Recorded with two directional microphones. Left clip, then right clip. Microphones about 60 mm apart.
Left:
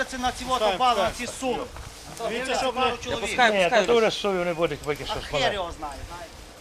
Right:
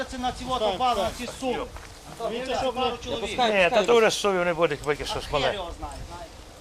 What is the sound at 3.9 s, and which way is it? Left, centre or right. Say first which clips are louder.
Speech: right 1 dB; right.